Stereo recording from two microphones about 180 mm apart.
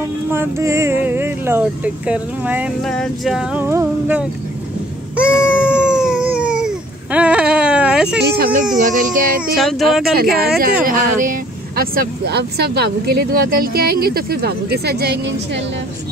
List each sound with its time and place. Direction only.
0.3 s speech: 15° right (ahead or behind)
2.8 s a sound: 5° left (ahead or behind)
8.2 s speech: 65° right (ahead or behind)
8.7 s speech: 45° right (ahead or behind)
9.6 s a sound: centre (ahead or behind)
10.1 s speech: 60° right (ahead or behind)